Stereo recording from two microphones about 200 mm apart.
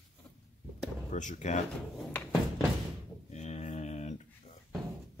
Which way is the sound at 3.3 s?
35° left (ahead or behind).